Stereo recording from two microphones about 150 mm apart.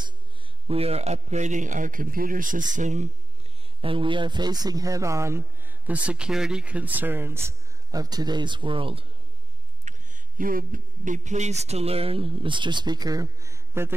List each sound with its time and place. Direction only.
0.7 s speech: 40° right (ahead or behind)
3.8 s a man's voice: 35° right (ahead or behind)
9.8 s speech: 60° right (ahead or behind); by 13.9 s 20° right (ahead or behind)